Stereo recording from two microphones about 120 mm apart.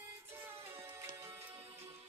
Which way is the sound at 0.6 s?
20° right (ahead or behind).